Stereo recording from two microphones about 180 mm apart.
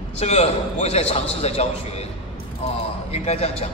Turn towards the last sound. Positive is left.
turn(degrees=35)  # may be behind; listen again after turning